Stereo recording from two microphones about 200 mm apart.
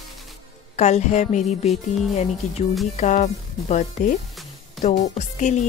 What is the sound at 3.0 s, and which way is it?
Speech, 35° left (ahead or behind).